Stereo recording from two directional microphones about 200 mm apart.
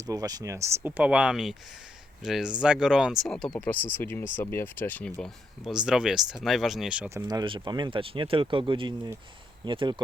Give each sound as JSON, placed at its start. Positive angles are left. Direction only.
{"t": 0.0, "sound": "speech", "side_deg": -15}
{"t": 7.3, "sound": "speech", "side_deg": -20}